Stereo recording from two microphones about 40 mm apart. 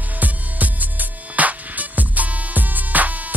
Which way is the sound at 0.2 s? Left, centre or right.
Right.